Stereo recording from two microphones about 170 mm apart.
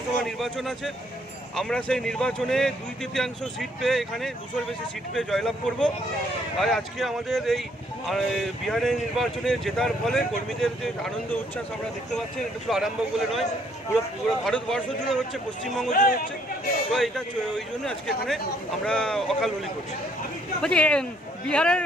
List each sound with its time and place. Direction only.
0.2 s speech: centre (ahead or behind)
12.6 s speech: centre (ahead or behind)
14.4 s speech: 5° left (ahead or behind)
15.9 s speech: 50° left (ahead or behind)
16.9 s speech: centre (ahead or behind)
18.9 s speech: 5° left (ahead or behind)
20.6 s speech: 5° left (ahead or behind)